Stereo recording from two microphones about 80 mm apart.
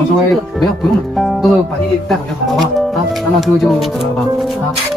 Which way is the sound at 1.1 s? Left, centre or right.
Centre.